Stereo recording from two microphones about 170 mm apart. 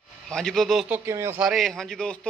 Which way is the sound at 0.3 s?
5° left (ahead or behind).